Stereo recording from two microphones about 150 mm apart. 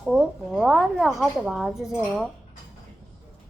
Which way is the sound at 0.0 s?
5° right (ahead or behind).